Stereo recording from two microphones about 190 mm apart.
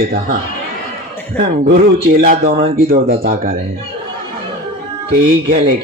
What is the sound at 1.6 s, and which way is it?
Speech, 50° right (ahead or behind).